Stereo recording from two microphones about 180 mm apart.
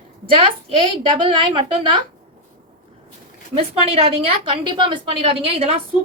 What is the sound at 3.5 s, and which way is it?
A woman's voice, 35° right (ahead or behind).